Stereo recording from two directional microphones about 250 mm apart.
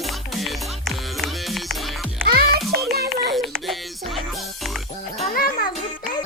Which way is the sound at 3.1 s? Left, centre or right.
Centre.